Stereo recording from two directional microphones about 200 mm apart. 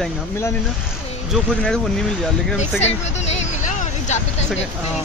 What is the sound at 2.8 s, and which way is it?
Vehicle, 35° left (ahead or behind).